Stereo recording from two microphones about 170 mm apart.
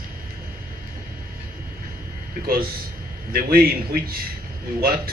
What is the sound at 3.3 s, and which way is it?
Speech, 60° right (ahead or behind).